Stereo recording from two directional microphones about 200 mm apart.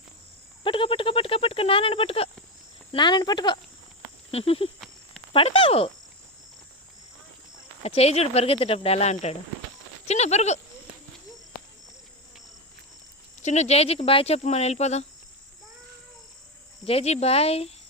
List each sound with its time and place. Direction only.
0.6 s speech: 25° left (ahead or behind)
7.9 s speech: 30° left (ahead or behind)
13.4 s speech: 35° left (ahead or behind)
16.8 s speech: 30° left (ahead or behind)